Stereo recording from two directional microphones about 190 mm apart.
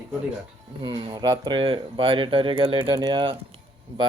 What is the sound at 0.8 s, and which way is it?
Speech, 25° right (ahead or behind).